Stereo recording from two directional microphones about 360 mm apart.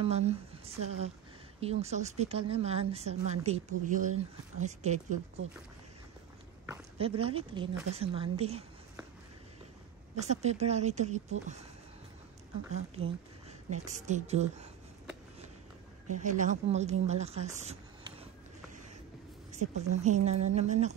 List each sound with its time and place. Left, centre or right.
0.0 s a woman's voice: centre
6.6 s speech: centre
10.2 s speech: centre
12.7 s speech: centre
16.1 s speech: right
19.5 s speech: centre